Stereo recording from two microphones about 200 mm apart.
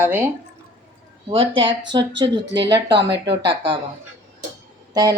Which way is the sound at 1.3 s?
25° right (ahead or behind).